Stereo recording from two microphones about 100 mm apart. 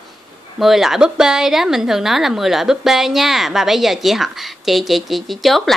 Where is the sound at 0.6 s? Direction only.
5° right (ahead or behind).